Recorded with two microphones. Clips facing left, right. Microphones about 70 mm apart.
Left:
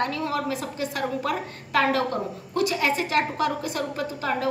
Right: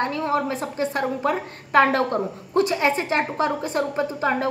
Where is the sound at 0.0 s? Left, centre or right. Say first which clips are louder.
Right 3 dB; right.